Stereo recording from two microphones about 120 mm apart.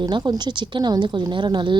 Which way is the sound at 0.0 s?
35° right (ahead or behind).